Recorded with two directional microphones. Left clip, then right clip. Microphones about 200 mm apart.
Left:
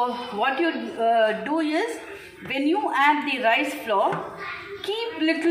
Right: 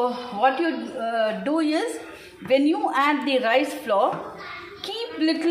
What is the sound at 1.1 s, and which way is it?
A woman's voice, 50° right (ahead or behind).